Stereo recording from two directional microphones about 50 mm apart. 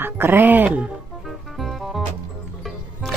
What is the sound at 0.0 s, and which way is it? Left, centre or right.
Speech, right.